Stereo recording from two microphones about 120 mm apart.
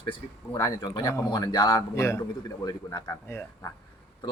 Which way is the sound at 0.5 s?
35° left (ahead or behind).